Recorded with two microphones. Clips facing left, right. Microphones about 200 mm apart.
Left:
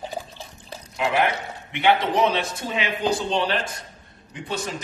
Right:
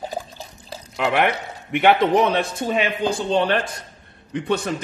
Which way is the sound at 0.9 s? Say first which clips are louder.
Right 2 dB; 70° right (ahead or behind).